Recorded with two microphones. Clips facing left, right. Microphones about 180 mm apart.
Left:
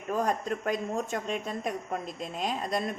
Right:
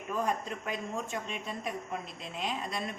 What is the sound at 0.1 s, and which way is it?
Speech, 40° left (ahead or behind).